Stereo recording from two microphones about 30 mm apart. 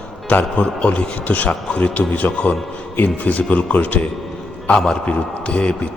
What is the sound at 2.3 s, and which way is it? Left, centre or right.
Speech, left.